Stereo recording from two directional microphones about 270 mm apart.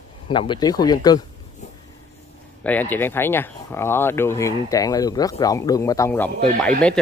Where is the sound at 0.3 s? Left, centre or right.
Centre.